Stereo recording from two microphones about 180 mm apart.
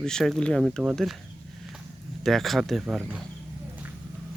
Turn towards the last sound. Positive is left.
turn(degrees=-5)  # may be behind; listen again after turning